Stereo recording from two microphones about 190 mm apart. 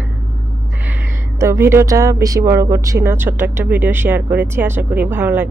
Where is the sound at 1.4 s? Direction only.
15° right (ahead or behind).